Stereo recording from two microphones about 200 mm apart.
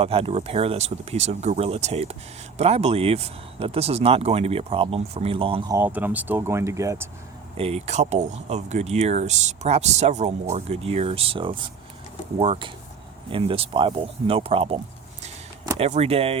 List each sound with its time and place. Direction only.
0.0 s speech: 30° right (ahead or behind)
5.7 s speech: 10° right (ahead or behind)
7.5 s speech: 30° right (ahead or behind)
15.8 s speech: 30° right (ahead or behind)